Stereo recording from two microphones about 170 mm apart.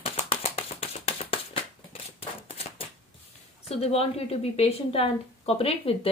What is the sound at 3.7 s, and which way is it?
A woman's voice, 35° left (ahead or behind).